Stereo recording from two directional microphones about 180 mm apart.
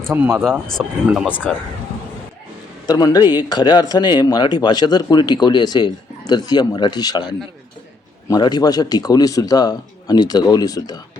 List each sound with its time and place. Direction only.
0.1 s speech: 10° right (ahead or behind)
1.3 s speech: 10° left (ahead or behind)
2.8 s speech: 20° left (ahead or behind)